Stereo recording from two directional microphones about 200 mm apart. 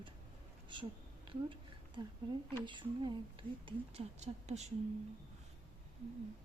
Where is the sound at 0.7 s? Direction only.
25° right (ahead or behind).